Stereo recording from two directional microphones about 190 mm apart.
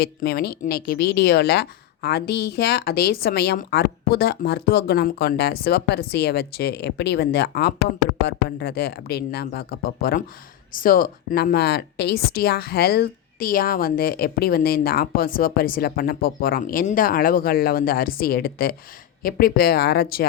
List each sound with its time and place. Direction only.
0.0 s speech: 55° left (ahead or behind)